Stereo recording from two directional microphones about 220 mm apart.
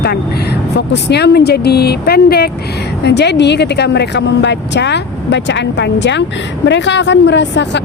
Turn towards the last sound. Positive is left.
turn(degrees=55)  # may be behind; listen again after turning